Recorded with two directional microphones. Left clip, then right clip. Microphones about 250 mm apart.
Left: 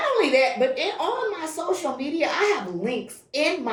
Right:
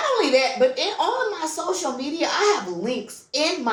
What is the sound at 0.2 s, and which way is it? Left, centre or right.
A woman's voice, centre.